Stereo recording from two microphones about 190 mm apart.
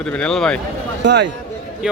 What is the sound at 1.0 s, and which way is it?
Speech, 65° right (ahead or behind).